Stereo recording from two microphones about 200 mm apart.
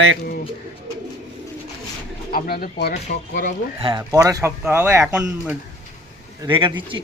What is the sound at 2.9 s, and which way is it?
Speech, 40° left (ahead or behind).